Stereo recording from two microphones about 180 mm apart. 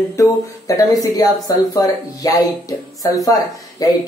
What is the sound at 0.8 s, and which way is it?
Speech, 20° left (ahead or behind).